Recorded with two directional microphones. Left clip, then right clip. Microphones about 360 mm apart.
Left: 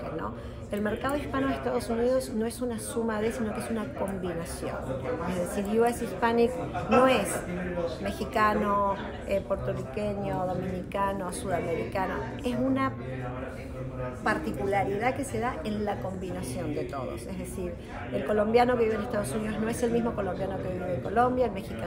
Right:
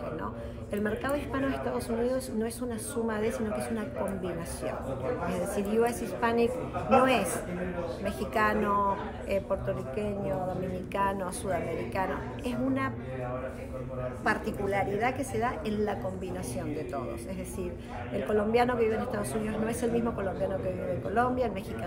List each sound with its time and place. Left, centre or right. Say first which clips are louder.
0.7 s a woman's voice: left 1 dB; centre
14.2 s a woman's voice: left 1 dB; centre
18.1 s a woman's voice: left 3 dB; centre